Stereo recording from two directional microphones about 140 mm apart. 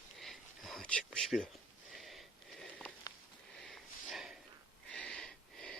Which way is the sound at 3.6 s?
Centre (ahead or behind).